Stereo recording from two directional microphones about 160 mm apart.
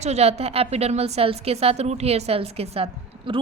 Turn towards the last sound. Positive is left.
turn(degrees=-35)  # may be behind; listen again after turning